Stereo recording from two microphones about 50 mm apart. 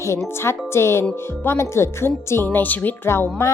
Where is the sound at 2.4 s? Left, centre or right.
Left.